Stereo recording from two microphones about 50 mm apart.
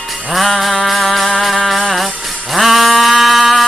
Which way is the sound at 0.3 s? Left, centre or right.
Centre.